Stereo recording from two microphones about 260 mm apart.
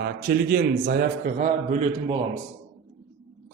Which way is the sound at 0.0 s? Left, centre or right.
Right.